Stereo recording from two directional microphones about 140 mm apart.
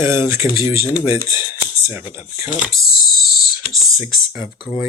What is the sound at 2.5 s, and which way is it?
Speech, 10° right (ahead or behind).